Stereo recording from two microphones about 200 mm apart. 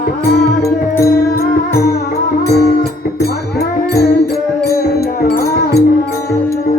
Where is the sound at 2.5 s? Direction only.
50° left (ahead or behind).